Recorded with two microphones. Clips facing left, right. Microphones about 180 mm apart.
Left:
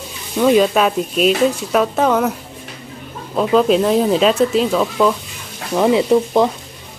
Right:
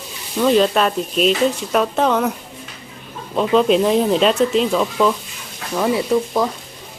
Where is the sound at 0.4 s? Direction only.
5° left (ahead or behind).